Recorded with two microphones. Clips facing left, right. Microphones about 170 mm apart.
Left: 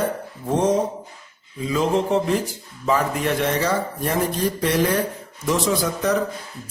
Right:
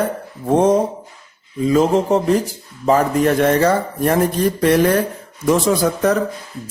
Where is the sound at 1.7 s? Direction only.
45° right (ahead or behind).